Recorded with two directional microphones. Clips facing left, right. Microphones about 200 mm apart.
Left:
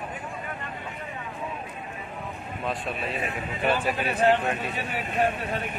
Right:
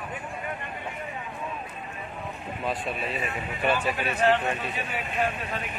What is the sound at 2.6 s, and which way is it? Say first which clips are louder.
A man's voice: even; centre (ahead or behind).